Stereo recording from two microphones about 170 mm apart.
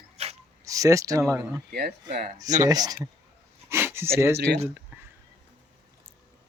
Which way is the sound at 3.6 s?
15° right (ahead or behind).